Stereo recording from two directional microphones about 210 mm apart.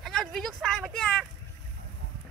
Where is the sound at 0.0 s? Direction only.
Centre (ahead or behind).